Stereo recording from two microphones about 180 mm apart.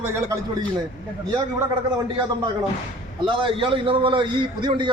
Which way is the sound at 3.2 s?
30° right (ahead or behind).